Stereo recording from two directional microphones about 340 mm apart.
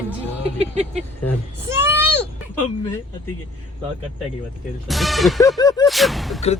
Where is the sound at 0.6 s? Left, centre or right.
Centre.